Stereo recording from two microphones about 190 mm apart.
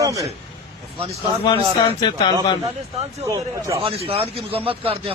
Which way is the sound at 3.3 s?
15° right (ahead or behind).